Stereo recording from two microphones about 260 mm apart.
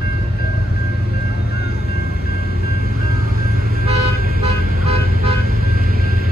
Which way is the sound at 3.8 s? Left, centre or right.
Right.